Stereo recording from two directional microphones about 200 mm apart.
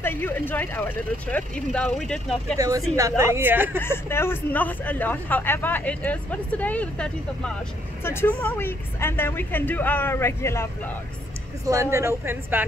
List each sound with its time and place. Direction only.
0.0 s a man's voice: 10° left (ahead or behind)
2.5 s speech: 15° right (ahead or behind)
3.8 s a man's voice: 10° left (ahead or behind)
11.6 s speech: 15° right (ahead or behind)